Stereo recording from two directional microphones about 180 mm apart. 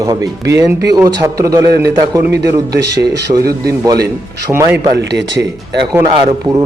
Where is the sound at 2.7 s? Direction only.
65° right (ahead or behind).